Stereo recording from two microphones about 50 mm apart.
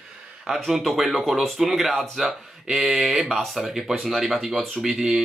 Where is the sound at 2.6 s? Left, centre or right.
Centre.